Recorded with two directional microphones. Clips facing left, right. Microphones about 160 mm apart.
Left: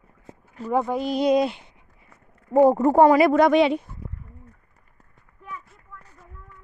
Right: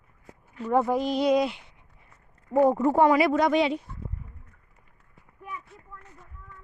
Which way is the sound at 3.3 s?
65° left (ahead or behind).